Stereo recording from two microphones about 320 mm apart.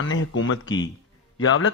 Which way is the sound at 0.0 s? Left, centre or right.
Left.